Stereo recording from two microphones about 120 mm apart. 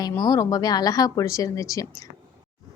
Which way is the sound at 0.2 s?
30° left (ahead or behind).